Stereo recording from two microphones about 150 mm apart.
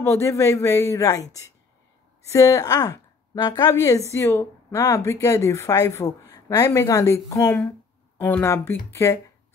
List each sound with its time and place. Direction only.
0.0 s a woman's voice: 20° left (ahead or behind)